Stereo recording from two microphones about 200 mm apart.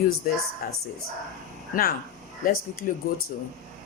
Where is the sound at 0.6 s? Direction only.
45° left (ahead or behind).